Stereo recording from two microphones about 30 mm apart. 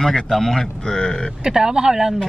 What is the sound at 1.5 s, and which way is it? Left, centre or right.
Speech, right.